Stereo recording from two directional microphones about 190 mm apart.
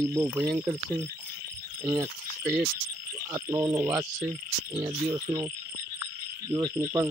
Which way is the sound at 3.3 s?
15° right (ahead or behind).